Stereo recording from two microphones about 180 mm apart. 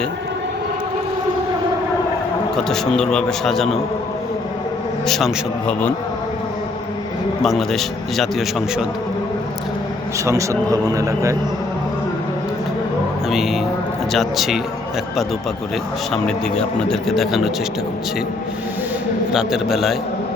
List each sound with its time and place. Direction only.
2.6 s a man's voice: 5° left (ahead or behind)
5.0 s a man's voice: centre (ahead or behind)
7.4 s a man's voice: centre (ahead or behind)
10.2 s a man's voice: 15° right (ahead or behind)
13.3 s a man's voice: centre (ahead or behind)
16.1 s a man's voice: 5° left (ahead or behind)
19.3 s a man's voice: 5° right (ahead or behind)